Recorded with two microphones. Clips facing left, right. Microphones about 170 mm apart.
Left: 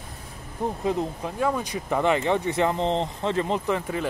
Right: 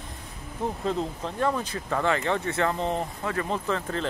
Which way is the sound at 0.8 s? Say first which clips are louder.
Left 3 dB; 15° left (ahead or behind).